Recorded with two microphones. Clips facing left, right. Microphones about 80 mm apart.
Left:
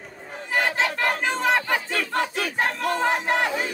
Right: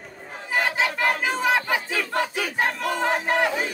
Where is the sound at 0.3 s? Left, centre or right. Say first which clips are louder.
Even; centre.